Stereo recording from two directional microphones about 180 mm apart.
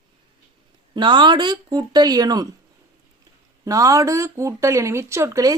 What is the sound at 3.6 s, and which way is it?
Speech, 20° right (ahead or behind).